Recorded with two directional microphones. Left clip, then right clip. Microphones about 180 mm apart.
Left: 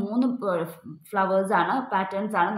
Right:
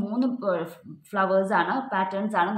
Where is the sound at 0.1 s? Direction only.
30° left (ahead or behind).